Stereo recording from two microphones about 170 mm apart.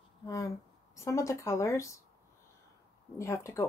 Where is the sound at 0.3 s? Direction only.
15° left (ahead or behind).